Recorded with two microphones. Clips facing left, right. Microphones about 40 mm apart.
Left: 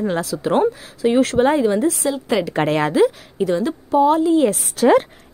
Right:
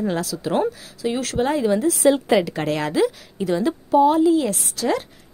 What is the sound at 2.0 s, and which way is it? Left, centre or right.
Speech, right.